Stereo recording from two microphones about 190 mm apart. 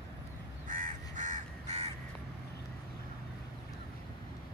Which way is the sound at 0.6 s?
45° right (ahead or behind).